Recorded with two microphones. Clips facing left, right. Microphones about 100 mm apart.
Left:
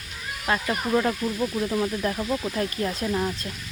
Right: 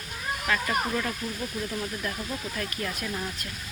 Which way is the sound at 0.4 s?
30° left (ahead or behind).